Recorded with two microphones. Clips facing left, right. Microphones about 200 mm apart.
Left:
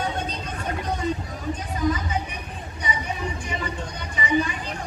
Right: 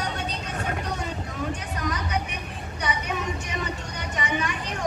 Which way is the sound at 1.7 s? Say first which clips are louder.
Left 7 dB; 75° right (ahead or behind).